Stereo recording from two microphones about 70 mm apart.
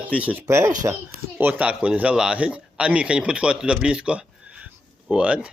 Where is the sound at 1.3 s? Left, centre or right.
Right.